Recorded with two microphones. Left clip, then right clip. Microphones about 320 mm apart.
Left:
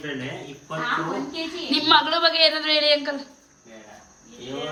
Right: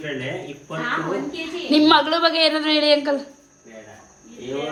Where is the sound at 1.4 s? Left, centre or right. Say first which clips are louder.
Right 4 dB; centre.